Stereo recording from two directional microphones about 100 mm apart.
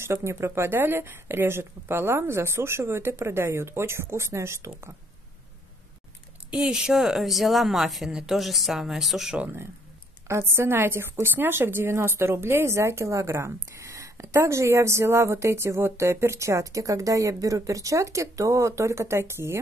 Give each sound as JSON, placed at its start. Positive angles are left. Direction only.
{"t": 0.0, "sound": "a woman's voice", "side_deg": -25}
{"t": 6.5, "sound": "speech", "side_deg": -10}
{"t": 10.2, "sound": "a woman's voice", "side_deg": -25}